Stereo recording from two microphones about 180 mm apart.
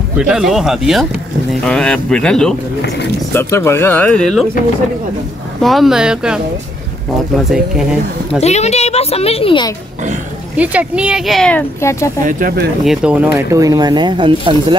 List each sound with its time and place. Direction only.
0.2 s speech: 5° right (ahead or behind)
3.3 s speech: 15° left (ahead or behind)
5.6 s speech: centre (ahead or behind)
7.4 s speech: 5° right (ahead or behind)
8.4 s a child's voice: 40° left (ahead or behind)
10.5 s speech: 10° right (ahead or behind)
11.8 s speech: 15° left (ahead or behind)
12.3 s speech: 50° right (ahead or behind)
12.8 s speech: 5° right (ahead or behind)
13.5 s speech: 20° right (ahead or behind)